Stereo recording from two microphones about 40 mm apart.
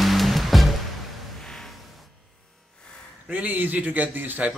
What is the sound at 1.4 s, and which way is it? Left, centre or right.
Music, centre.